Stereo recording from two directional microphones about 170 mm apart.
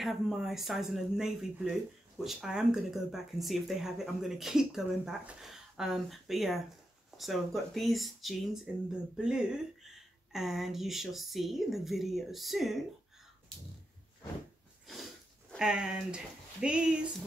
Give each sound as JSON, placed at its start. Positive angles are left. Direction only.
{"t": 0.0, "sound": "speech", "side_deg": 0}
{"t": 15.5, "sound": "speech", "side_deg": -5}